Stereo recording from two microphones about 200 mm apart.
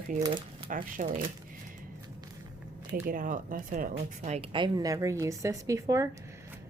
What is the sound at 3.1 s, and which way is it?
A woman's voice, 45° right (ahead or behind).